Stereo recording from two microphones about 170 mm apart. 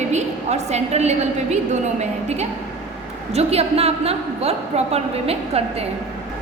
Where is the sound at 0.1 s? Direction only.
40° right (ahead or behind).